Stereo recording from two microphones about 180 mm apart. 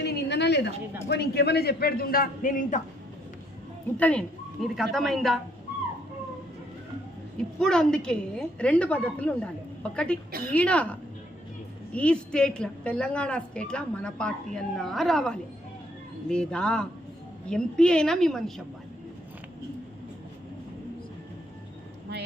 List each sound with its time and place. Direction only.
0.0 s a woman's voice: 65° left (ahead or behind); by 2.8 s 50° left (ahead or behind)
4.0 s a woman's voice: 5° left (ahead or behind)
7.6 s a woman's voice: 5° left (ahead or behind)